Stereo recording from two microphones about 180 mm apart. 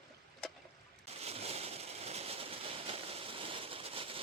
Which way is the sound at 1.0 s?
35° right (ahead or behind).